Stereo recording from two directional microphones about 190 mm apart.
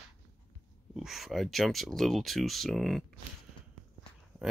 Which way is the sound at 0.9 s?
Centre (ahead or behind).